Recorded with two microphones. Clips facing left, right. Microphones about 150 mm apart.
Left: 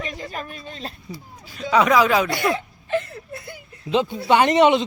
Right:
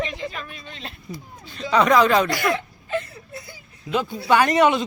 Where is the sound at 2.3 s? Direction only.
30° left (ahead or behind).